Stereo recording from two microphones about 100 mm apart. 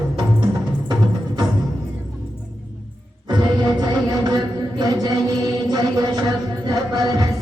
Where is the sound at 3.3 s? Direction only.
45° right (ahead or behind).